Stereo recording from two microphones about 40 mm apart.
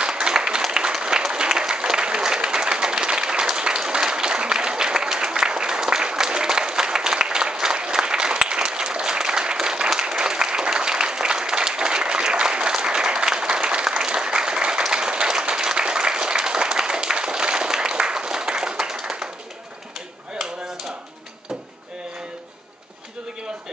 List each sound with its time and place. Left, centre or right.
0.0 s applause: right